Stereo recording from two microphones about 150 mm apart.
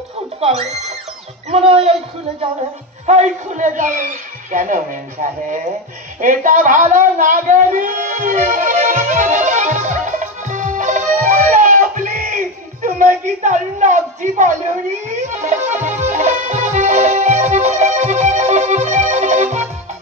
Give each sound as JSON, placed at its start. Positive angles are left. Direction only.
{"t": 0.4, "sound": "speech", "side_deg": -45}
{"t": 3.1, "sound": "a man's voice", "side_deg": -55}
{"t": 6.9, "sound": "music", "side_deg": -60}